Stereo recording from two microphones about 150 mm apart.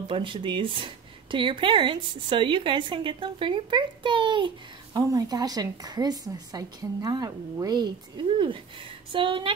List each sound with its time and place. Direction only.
0.1 s a woman's voice: 35° right (ahead or behind)